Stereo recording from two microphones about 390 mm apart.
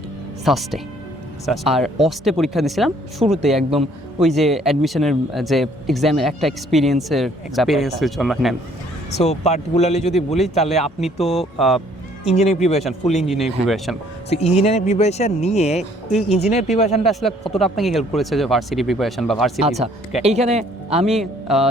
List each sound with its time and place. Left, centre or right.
0.4 s speech: centre
9.0 s speech: centre
11.3 s speech: centre
12.2 s speech: centre
13.2 s speech: centre
14.3 s speech: centre
17.1 s speech: centre
19.6 s speech: centre
21.0 s speech: centre